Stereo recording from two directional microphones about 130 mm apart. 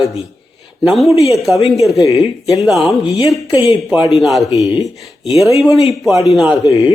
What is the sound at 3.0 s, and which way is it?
Speech, 40° left (ahead or behind).